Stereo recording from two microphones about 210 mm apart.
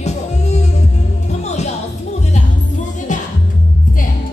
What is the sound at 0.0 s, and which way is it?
Music, 30° left (ahead or behind).